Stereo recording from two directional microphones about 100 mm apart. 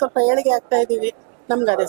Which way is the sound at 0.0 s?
20° right (ahead or behind).